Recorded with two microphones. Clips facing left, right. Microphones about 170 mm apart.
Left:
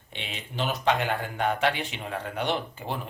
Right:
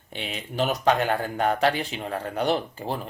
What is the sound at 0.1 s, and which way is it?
Speech, 40° right (ahead or behind).